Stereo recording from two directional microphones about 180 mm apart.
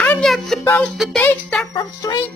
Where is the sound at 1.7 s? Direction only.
25° left (ahead or behind).